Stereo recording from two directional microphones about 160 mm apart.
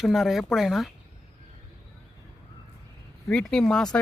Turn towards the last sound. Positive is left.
turn(degrees=5)  # may be behind; listen again after turning